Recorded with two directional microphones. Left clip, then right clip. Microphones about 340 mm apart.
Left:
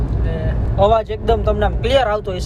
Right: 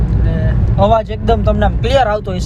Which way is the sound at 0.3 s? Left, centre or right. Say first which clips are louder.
Right 2 dB; centre.